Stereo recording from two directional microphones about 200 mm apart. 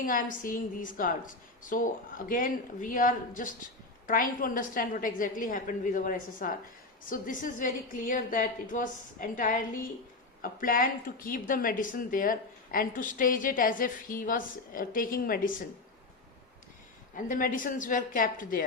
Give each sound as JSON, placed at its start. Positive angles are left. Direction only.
{"t": 0.0, "sound": "a woman's voice", "side_deg": 45}
{"t": 17.2, "sound": "a woman's voice", "side_deg": 40}